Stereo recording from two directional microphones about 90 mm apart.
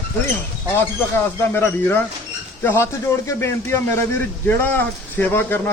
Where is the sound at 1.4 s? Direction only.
25° left (ahead or behind).